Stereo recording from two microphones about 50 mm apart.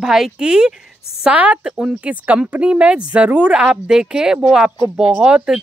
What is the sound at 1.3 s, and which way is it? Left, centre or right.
Speech, right.